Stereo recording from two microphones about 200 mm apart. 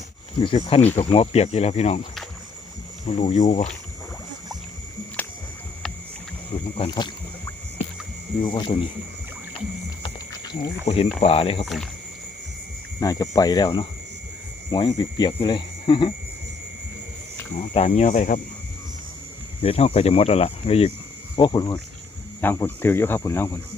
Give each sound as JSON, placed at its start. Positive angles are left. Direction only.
{"t": 0.3, "sound": "speech", "side_deg": 25}
{"t": 3.1, "sound": "speech", "side_deg": 35}
{"t": 5.2, "sound": "a sound", "side_deg": 10}
{"t": 6.7, "sound": "speech", "side_deg": 25}
{"t": 10.8, "sound": "speech", "side_deg": 30}
{"t": 11.6, "sound": "speech", "side_deg": 0}
{"t": 13.0, "sound": "speech", "side_deg": 20}
{"t": 17.7, "sound": "speech", "side_deg": 30}
{"t": 19.6, "sound": "speech", "side_deg": 30}